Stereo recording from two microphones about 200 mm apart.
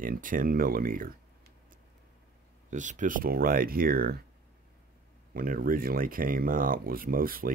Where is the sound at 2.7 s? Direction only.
40° right (ahead or behind).